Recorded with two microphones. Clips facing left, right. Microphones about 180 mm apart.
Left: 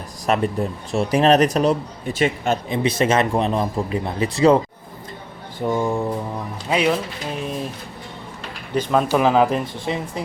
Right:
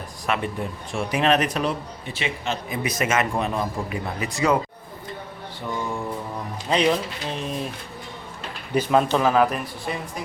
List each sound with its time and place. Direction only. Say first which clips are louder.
0.3 s speech: left 6 dB; 40° left (ahead or behind)
2.6 s speech: left 5 dB; 30° left (ahead or behind)
5.6 s speech: left 8 dB; 40° left (ahead or behind)
6.7 s speech: left 1 dB; 5° left (ahead or behind)
8.7 s speech: even; 10° right (ahead or behind)
9.0 s speech: left 3 dB; 10° left (ahead or behind)